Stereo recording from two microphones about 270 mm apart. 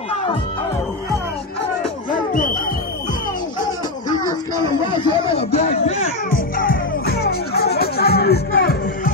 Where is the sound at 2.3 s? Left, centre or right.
Left.